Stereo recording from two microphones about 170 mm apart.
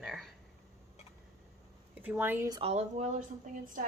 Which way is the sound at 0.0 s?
Centre (ahead or behind).